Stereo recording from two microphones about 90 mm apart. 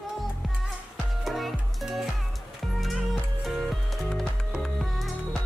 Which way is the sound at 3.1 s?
Centre (ahead or behind).